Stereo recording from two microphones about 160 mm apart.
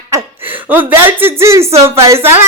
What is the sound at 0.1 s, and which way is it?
A man's voice, 15° right (ahead or behind).